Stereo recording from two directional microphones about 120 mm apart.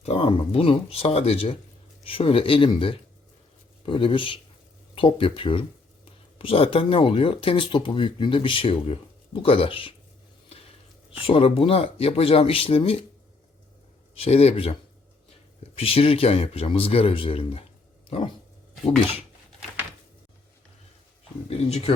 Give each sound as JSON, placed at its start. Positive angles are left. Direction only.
{"t": 0.0, "sound": "speech", "side_deg": 55}
{"t": 11.3, "sound": "speech", "side_deg": 50}
{"t": 14.2, "sound": "speech", "side_deg": 60}
{"t": 21.5, "sound": "speech", "side_deg": 60}